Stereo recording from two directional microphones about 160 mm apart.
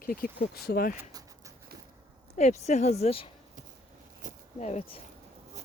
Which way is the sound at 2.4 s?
45° left (ahead or behind).